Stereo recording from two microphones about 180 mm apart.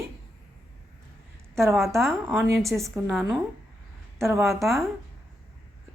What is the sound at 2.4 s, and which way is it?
Speech, centre (ahead or behind).